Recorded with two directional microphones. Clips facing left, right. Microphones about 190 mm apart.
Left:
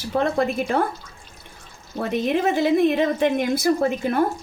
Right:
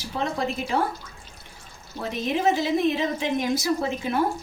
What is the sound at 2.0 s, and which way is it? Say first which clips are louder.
A woman's voice: left 4 dB; 55° left (ahead or behind).